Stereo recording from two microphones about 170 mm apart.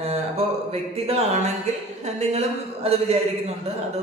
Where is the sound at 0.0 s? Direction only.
35° right (ahead or behind).